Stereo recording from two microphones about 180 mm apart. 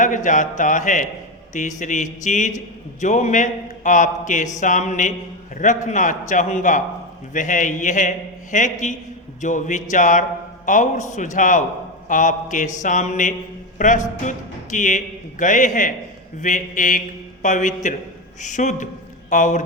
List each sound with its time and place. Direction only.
0.0 s a man's voice: 45° left (ahead or behind)